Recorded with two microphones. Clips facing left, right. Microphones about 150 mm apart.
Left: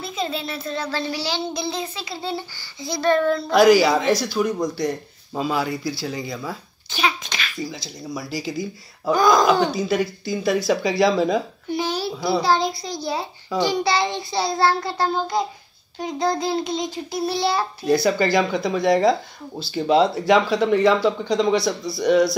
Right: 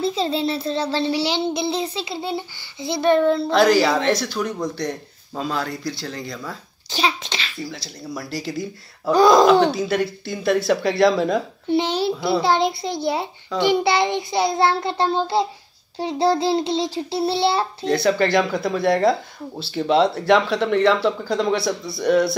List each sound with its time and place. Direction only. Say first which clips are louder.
0.0 s child singing: right 6 dB; 30° right (ahead or behind)
3.5 s speech: left 4 dB; 5° left (ahead or behind)
7.0 s a child's voice: right 1 dB; 30° right (ahead or behind)
7.5 s speech: left 1 dB; centre (ahead or behind)
9.1 s child singing: right 4 dB; 30° right (ahead or behind)
9.5 s speech: right 3 dB; centre (ahead or behind)
11.7 s a sound: right 4 dB; 20° right (ahead or behind)
12.4 s child singing: even; 25° right (ahead or behind)
17.8 s speech: even; centre (ahead or behind)